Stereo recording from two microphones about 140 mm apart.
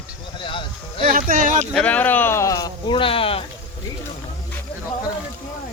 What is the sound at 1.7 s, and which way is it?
Speech, 10° left (ahead or behind).